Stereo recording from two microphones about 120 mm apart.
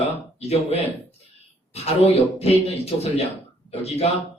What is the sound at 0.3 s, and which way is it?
A man's voice, 60° left (ahead or behind).